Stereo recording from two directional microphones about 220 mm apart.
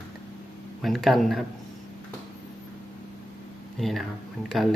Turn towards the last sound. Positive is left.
turn(degrees=0)  # may be behind; listen again after turning